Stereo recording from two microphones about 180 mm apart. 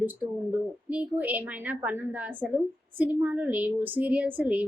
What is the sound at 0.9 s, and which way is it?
A woman's voice, 10° right (ahead or behind).